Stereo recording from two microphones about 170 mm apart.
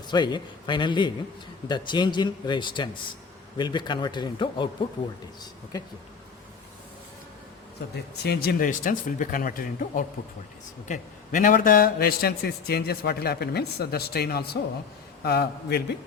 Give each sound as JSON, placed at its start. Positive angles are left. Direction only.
{"t": 0.1, "sound": "speech", "side_deg": 25}
{"t": 8.2, "sound": "a man's voice", "side_deg": 70}